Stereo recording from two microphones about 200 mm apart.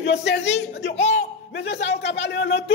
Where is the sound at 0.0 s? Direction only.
60° left (ahead or behind).